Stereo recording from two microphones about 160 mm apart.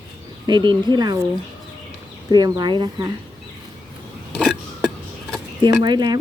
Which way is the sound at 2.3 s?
25° right (ahead or behind).